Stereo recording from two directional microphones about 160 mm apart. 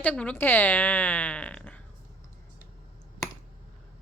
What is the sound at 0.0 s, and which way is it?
Speech, 10° left (ahead or behind).